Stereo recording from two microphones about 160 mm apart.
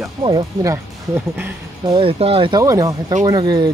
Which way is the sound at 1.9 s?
35° right (ahead or behind).